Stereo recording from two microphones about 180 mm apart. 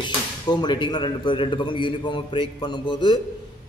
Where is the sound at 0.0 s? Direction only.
25° left (ahead or behind).